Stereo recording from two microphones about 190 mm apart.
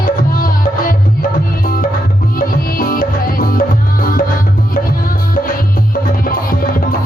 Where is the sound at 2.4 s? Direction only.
45° left (ahead or behind).